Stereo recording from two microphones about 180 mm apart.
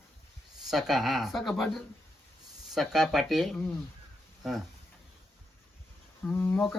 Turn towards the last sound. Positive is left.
turn(degrees=5)  # may be behind; listen again after turning